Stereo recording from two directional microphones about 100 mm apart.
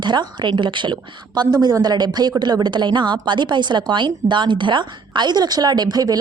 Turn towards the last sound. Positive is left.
turn(degrees=-40)  # may be behind; listen again after turning